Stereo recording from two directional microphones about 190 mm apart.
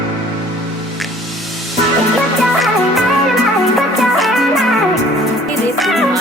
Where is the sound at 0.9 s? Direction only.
Centre (ahead or behind).